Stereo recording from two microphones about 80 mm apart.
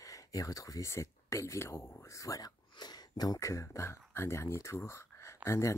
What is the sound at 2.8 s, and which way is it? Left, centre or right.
Speech, left.